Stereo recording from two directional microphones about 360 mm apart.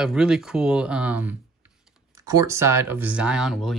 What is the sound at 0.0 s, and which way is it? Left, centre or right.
Speech, centre.